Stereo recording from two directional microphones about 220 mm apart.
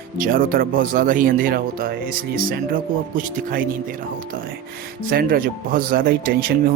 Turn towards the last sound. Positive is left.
turn(degrees=-40)  # may be behind; listen again after turning